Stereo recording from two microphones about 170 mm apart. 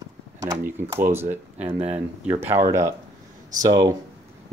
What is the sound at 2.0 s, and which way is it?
Speech, 15° right (ahead or behind).